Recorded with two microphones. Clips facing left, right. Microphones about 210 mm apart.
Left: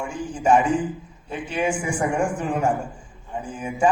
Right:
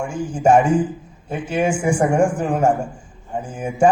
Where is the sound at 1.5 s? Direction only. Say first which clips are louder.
Right 6 dB; 45° right (ahead or behind).